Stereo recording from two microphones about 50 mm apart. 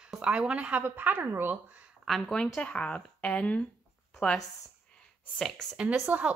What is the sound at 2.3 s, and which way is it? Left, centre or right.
Speech, centre.